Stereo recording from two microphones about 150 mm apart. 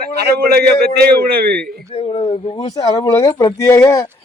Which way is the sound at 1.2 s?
90° right.